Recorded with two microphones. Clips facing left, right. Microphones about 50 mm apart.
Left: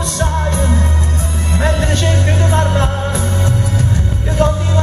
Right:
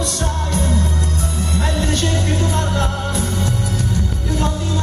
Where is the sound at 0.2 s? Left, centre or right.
Left.